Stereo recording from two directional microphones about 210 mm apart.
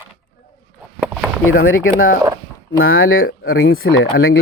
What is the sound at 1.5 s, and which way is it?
Speech, 75° left (ahead or behind).